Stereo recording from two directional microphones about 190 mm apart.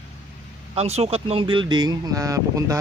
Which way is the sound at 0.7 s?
35° right (ahead or behind).